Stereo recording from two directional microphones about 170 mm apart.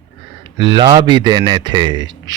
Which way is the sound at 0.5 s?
25° right (ahead or behind).